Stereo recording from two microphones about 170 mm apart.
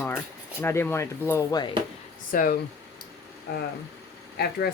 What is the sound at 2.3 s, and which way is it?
Speech, 60° left (ahead or behind).